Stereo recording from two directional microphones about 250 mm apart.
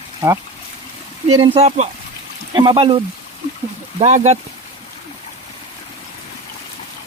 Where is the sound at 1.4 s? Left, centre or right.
Right.